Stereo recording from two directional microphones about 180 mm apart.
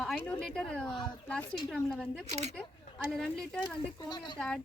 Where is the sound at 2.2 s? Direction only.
35° right (ahead or behind).